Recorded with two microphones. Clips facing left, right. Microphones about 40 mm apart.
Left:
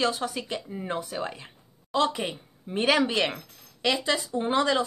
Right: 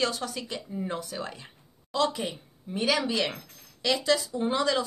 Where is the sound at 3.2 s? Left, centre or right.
Left.